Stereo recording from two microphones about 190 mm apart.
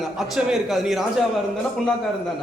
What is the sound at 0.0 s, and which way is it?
A man's voice, centre (ahead or behind).